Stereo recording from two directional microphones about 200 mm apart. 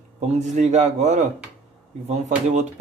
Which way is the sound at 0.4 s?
35° right (ahead or behind).